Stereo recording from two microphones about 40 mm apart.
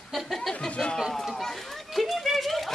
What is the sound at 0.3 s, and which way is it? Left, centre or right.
Music, centre.